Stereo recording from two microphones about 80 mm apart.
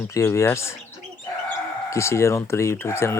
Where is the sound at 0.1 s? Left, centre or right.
Left.